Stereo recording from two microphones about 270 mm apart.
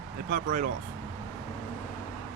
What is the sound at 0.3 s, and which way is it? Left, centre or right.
Speech, right.